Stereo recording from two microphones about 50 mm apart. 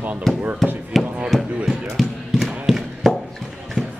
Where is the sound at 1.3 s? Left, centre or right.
Centre.